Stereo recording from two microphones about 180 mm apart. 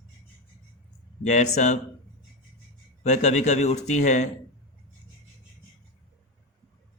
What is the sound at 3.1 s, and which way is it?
Speech, 40° left (ahead or behind).